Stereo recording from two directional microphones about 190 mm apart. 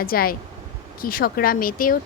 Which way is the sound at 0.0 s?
50° left (ahead or behind).